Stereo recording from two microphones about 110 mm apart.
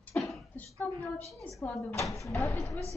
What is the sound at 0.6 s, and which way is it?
A woman's voice, 15° left (ahead or behind).